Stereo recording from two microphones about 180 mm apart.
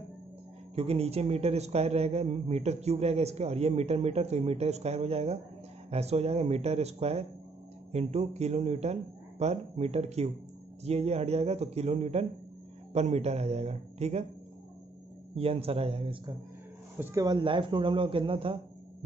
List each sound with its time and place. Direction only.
0.7 s a man's voice: 35° right (ahead or behind)
15.3 s a man's voice: 35° right (ahead or behind)
17.0 s speech: 20° right (ahead or behind)